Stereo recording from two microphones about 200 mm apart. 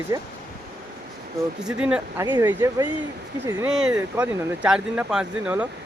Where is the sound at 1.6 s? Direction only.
5° right (ahead or behind).